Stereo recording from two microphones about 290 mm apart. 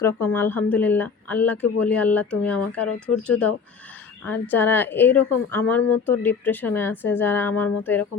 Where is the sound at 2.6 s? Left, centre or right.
Left.